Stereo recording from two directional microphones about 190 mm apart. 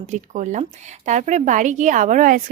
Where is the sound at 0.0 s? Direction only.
40° right (ahead or behind).